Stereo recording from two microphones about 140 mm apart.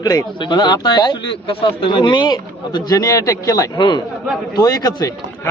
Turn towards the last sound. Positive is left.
turn(degrees=25)  # may be behind; listen again after turning